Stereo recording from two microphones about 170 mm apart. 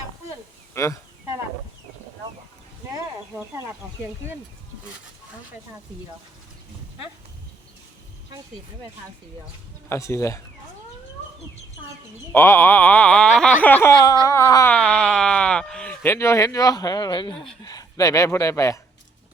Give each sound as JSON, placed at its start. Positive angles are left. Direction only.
{"t": 0.7, "sound": "speech", "side_deg": 15}
{"t": 9.9, "sound": "speech", "side_deg": 15}
{"t": 12.3, "sound": "speech", "side_deg": 15}
{"t": 14.8, "sound": "speech", "side_deg": 5}